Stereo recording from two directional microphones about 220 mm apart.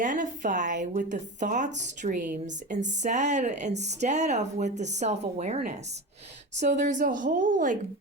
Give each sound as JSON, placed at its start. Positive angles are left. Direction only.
{"t": 0.0, "sound": "a woman's voice", "side_deg": -35}